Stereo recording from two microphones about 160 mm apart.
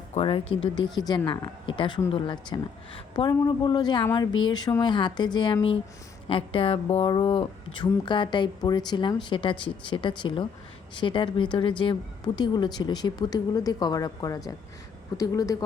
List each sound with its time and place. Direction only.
0.1 s a woman's voice: 35° left (ahead or behind)